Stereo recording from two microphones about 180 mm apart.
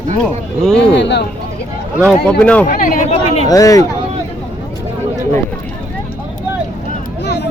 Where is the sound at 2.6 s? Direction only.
50° left (ahead or behind).